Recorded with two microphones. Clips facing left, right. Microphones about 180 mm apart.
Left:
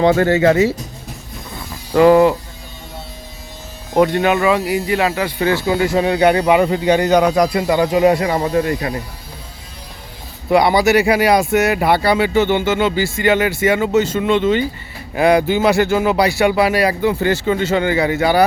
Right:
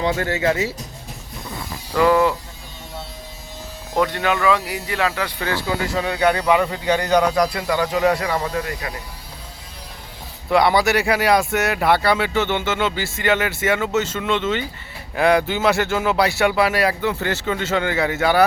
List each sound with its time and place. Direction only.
0.0 s speech: 70° left (ahead or behind)
1.9 s speech: 25° left (ahead or behind)
3.9 s speech: 20° left (ahead or behind)
10.5 s speech: centre (ahead or behind)